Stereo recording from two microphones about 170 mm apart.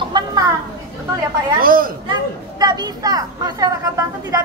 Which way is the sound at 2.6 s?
25° right (ahead or behind).